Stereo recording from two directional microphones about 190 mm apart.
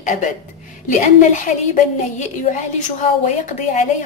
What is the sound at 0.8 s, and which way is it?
A woman's voice, 40° left (ahead or behind).